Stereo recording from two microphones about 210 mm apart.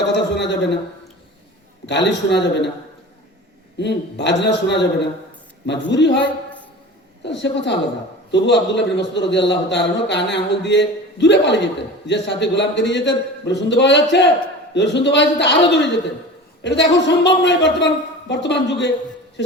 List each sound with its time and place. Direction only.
0.1 s a man's voice: 55° left (ahead or behind)
1.9 s a man's voice: 55° left (ahead or behind)
3.8 s a man's voice: 55° left (ahead or behind)
7.3 s a man's voice: 55° left (ahead or behind)